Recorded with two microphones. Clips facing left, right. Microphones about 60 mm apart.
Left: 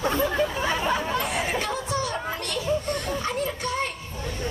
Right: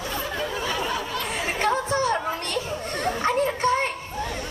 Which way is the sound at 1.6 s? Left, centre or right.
Right.